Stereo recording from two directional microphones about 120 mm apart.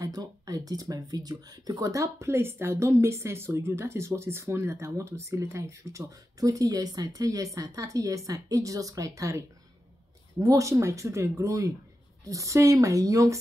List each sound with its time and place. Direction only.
0.0 s speech: 30° right (ahead or behind)
10.4 s speech: 25° right (ahead or behind)